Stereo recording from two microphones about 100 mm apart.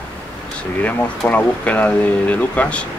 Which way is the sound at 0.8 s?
15° left (ahead or behind).